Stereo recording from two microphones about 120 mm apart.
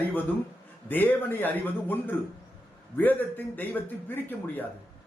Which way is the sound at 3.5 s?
15° left (ahead or behind).